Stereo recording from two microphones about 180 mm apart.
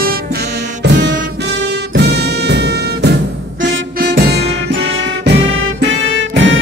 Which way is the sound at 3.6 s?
80° right.